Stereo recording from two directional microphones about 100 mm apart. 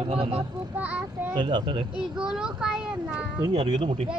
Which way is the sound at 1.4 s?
55° right (ahead or behind).